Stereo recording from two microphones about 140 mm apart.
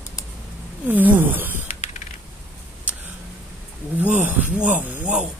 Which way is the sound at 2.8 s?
10° right (ahead or behind).